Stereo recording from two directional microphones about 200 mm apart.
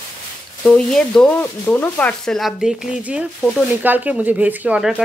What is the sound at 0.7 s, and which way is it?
A woman's voice, 5° left (ahead or behind).